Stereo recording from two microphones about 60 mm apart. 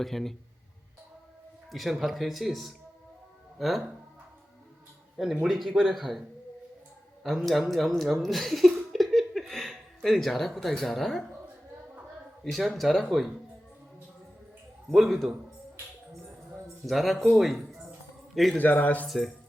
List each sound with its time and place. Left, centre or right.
0.0 s speech: centre
1.7 s speech: centre
5.1 s speech: centre
7.3 s speech: centre
8.9 s laughter: centre
9.5 s speech: centre
12.5 s speech: centre
14.8 s speech: centre
16.8 s speech: centre
18.5 s speech: left
19.0 s speech: centre